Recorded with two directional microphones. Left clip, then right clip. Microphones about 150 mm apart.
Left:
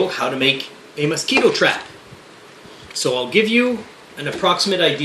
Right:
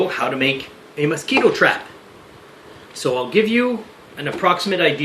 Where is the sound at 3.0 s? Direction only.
10° right (ahead or behind).